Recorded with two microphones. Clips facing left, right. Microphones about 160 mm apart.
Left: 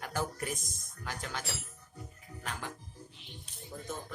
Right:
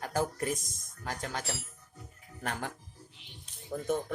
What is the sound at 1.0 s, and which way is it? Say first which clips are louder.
Speech: right 3 dB; 40° right (ahead or behind).